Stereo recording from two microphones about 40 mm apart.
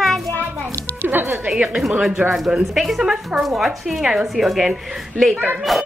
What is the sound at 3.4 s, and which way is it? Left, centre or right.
Speech, centre.